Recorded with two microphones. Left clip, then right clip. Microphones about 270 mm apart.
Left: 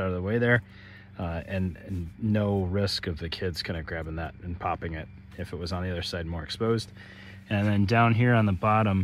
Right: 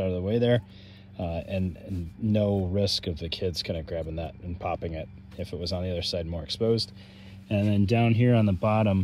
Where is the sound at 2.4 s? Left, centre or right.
Centre.